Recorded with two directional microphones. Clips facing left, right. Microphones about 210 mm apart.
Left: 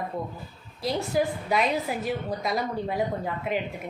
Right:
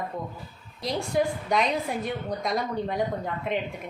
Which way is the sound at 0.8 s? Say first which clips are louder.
Even; 5° left (ahead or behind).